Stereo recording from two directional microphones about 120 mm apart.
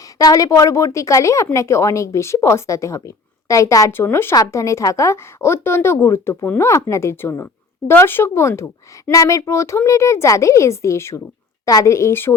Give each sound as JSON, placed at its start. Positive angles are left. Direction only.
{"t": 0.2, "sound": "speech", "side_deg": 30}